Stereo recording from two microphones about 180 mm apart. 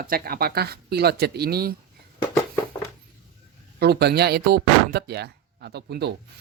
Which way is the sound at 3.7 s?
65° right (ahead or behind).